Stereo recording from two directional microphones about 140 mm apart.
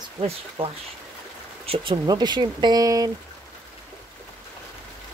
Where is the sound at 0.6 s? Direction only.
40° right (ahead or behind).